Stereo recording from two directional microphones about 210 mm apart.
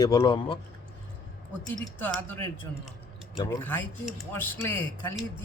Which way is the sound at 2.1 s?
10° left (ahead or behind).